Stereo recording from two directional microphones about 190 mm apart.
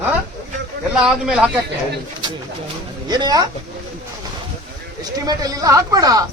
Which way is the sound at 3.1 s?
20° right (ahead or behind).